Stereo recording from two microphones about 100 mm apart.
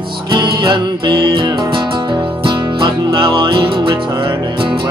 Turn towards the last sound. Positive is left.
turn(degrees=-55)  # may be behind; listen again after turning